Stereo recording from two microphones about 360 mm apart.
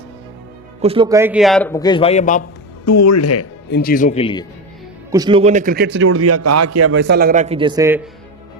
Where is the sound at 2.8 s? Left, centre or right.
Left; by 4.4 s centre.